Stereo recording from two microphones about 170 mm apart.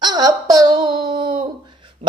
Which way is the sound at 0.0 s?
20° right (ahead or behind).